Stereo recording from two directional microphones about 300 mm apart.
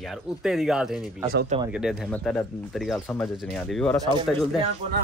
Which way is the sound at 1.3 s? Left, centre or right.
Right.